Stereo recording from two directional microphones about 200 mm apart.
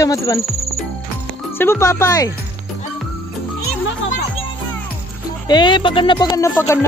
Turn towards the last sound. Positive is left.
turn(degrees=15)  # may be behind; listen again after turning